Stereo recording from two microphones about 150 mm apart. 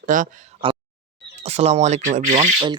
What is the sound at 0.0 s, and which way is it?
Speech, 60° right (ahead or behind).